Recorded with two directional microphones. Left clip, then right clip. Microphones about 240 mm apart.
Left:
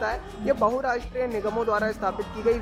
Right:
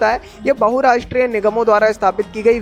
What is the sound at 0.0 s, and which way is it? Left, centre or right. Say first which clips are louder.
Speech: right 12 dB; right.